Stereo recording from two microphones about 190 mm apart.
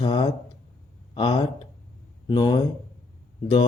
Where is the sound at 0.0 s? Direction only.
25° left (ahead or behind).